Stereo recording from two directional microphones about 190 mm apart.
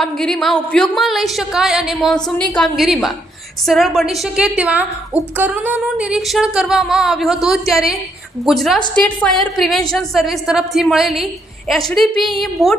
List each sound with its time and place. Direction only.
0.0 s a woman's voice: 5° left (ahead or behind)